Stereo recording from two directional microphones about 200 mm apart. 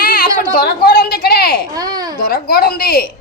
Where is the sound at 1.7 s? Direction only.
20° right (ahead or behind).